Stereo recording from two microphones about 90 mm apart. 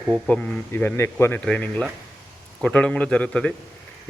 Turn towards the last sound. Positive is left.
turn(degrees=10)  # may be behind; listen again after turning